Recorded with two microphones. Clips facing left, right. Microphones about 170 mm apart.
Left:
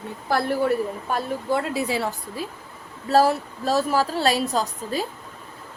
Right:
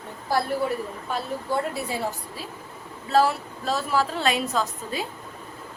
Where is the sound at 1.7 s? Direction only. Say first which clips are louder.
Left 5 dB; 90° left.